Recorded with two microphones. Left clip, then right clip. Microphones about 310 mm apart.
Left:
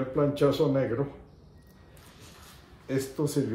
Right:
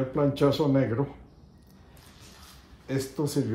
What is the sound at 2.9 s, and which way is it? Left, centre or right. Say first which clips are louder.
Speech: even; centre.